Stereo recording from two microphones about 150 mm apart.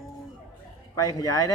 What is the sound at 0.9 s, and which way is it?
Speech, 25° left (ahead or behind).